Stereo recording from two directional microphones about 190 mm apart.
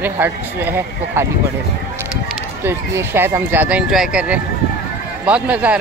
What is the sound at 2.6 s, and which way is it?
Speech, 10° right (ahead or behind).